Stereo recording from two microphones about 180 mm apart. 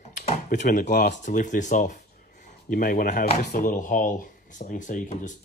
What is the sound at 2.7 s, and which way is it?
Speech, 55° left (ahead or behind).